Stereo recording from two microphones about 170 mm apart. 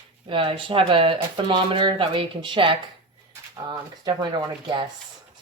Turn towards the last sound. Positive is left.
turn(degrees=-30)  # may be behind; listen again after turning